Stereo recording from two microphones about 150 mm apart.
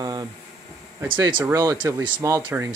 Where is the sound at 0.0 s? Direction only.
25° right (ahead or behind).